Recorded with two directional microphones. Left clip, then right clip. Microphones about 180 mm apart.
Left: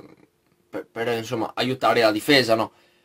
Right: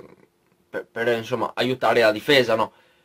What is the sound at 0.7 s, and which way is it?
A man's voice, centre (ahead or behind).